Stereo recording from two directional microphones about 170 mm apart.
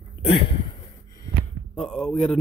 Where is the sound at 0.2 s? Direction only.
35° left (ahead or behind).